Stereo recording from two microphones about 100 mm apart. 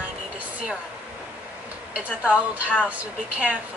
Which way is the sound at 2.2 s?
10° right (ahead or behind).